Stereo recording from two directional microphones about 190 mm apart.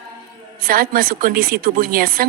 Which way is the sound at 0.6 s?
50° right (ahead or behind).